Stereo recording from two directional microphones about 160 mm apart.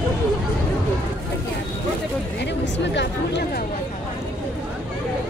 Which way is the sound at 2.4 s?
90° left.